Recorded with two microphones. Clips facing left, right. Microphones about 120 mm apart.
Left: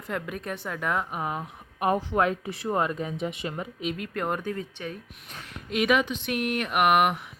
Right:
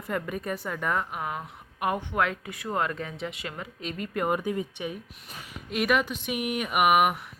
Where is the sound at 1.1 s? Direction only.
30° left (ahead or behind).